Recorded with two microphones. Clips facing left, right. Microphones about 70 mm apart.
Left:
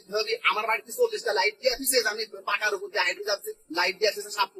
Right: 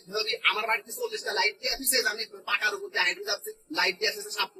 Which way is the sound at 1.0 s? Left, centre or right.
Left.